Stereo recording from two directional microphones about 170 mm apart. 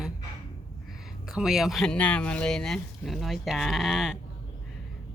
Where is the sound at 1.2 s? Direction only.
5° right (ahead or behind).